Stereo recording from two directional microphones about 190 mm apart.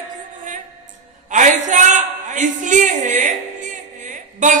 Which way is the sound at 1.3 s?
40° right (ahead or behind).